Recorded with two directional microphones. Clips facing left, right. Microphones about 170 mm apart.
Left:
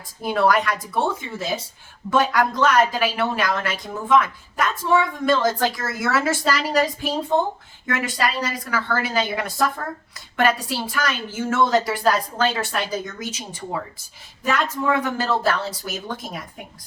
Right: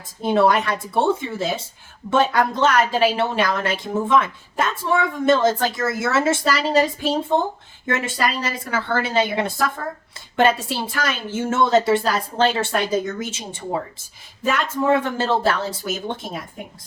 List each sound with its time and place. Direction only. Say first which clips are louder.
0.2 s a woman's voice: right 2 dB; 25° right (ahead or behind)